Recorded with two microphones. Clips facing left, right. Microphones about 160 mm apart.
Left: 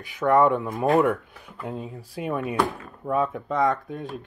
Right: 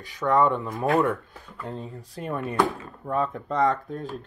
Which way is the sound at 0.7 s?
20° left (ahead or behind).